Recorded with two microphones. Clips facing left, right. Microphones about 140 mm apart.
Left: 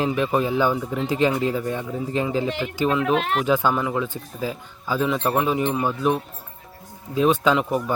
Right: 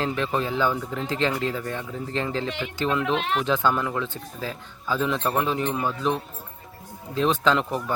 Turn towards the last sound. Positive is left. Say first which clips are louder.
# left 2 dB
turn(degrees=10)  # may be behind; listen again after turning